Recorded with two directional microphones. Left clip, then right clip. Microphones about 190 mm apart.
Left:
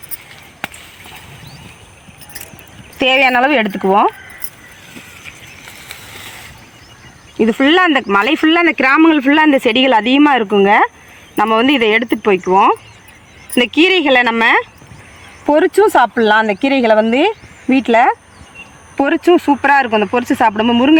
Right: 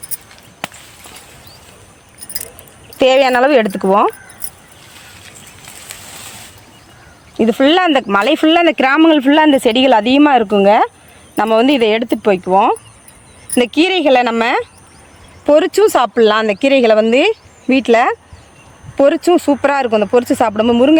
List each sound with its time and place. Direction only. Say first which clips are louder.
3.0 s speech: right 1 dB; 65° right (ahead or behind); by 4.1 s 45° right (ahead or behind)
7.3 s speech: even; 60° right (ahead or behind)
13.7 s speech: left 1 dB; 75° right (ahead or behind)
15.4 s speech: right 1 dB; 35° right (ahead or behind)
18.9 s speech: right 1 dB; 50° right (ahead or behind)